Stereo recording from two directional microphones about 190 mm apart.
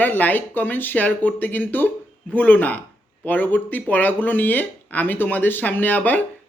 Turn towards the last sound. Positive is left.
turn(degrees=10)  # may be behind; listen again after turning